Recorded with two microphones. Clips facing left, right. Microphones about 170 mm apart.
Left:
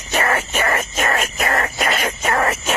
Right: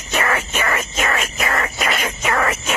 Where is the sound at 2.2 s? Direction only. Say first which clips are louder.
Even; 35° left (ahead or behind).